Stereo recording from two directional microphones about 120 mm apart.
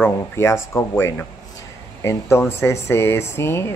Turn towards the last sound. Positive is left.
turn(degrees=20)  # may be behind; listen again after turning